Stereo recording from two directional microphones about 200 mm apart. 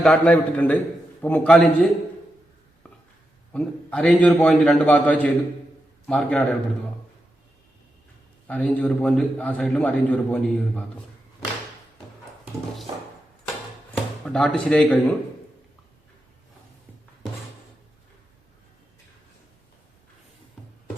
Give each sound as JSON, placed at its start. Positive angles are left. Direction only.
{"t": 0.0, "sound": "a man's voice", "side_deg": 5}
{"t": 3.5, "sound": "a man's voice", "side_deg": 5}
{"t": 8.4, "sound": "a man's voice", "side_deg": 10}
{"t": 13.9, "sound": "speech", "side_deg": 0}